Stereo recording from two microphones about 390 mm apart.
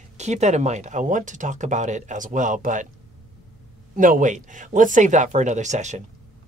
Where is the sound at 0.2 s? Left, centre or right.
Centre.